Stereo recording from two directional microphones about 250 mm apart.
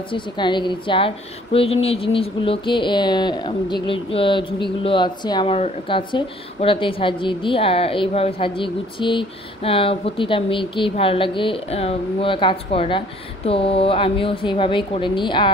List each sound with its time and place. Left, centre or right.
0.1 s a woman's voice: centre